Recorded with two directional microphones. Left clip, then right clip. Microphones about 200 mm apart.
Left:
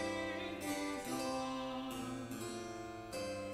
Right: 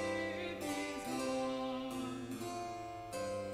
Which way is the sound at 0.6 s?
Centre (ahead or behind).